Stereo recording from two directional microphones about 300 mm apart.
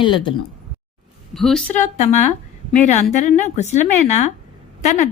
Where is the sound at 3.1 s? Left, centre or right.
Left.